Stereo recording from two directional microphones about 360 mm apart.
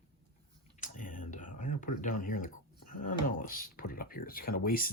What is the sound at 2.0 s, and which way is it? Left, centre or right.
Speech, left.